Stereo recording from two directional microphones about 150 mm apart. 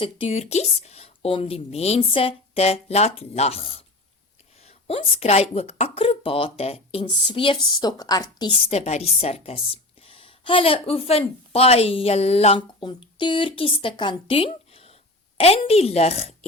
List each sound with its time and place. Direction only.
0.0 s a woman's voice: 40° left (ahead or behind)
8.7 s a woman's voice: 45° left (ahead or behind)